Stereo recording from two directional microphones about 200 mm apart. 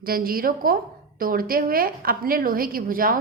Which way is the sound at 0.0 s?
45° right (ahead or behind).